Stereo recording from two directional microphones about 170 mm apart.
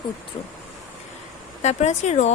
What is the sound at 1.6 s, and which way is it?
Speech, 40° left (ahead or behind).